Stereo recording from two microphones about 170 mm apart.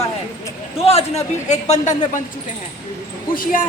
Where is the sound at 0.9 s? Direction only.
40° left (ahead or behind).